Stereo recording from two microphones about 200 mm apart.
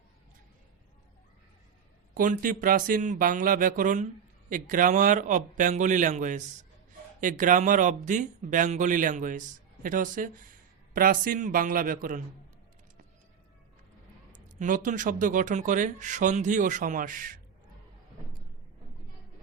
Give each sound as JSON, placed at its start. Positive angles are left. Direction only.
{"t": 2.1, "sound": "speech", "side_deg": -45}
{"t": 14.3, "sound": "speech", "side_deg": -40}